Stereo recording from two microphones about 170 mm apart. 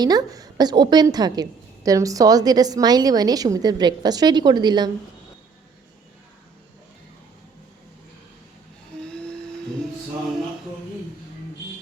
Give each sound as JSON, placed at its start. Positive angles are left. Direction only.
{"t": 0.0, "sound": "a woman's voice", "side_deg": -25}
{"t": 9.0, "sound": "humming", "side_deg": 5}